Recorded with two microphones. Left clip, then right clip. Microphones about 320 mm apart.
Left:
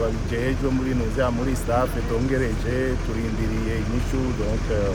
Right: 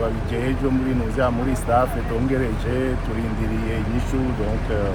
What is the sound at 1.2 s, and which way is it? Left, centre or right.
Speech, centre.